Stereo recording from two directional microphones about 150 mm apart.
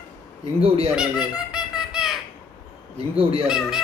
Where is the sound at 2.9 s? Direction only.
40° right (ahead or behind).